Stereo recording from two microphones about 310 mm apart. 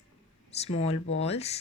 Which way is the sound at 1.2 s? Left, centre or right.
Centre.